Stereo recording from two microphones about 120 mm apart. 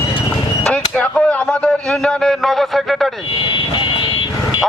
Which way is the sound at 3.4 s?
40° left (ahead or behind).